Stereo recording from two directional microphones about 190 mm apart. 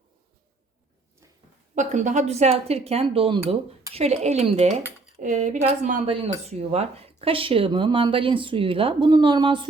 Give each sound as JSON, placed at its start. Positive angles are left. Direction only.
{"t": 1.7, "sound": "speech", "side_deg": -40}